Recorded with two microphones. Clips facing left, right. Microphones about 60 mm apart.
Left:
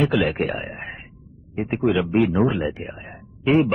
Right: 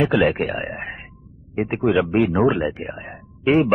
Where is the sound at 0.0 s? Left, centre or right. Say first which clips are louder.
Right 2 dB; right.